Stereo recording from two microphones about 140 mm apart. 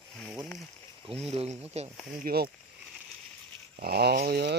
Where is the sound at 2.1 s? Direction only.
90° right.